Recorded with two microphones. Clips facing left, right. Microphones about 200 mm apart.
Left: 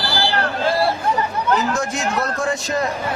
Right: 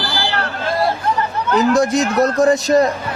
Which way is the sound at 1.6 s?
35° right (ahead or behind).